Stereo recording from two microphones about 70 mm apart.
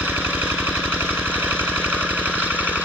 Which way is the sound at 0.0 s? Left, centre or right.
Right.